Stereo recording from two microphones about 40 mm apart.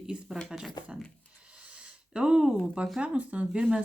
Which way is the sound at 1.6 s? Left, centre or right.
Right.